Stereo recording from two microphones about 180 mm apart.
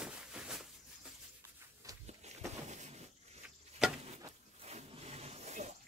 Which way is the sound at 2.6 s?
40° right (ahead or behind).